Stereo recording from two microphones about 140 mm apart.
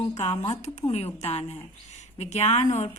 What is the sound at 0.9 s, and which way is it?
A woman's voice, 50° left (ahead or behind).